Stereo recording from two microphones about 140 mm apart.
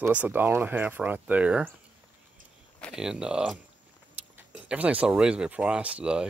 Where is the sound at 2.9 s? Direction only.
5° right (ahead or behind).